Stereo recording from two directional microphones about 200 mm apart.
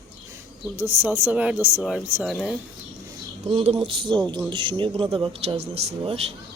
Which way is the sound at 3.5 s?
25° right (ahead or behind).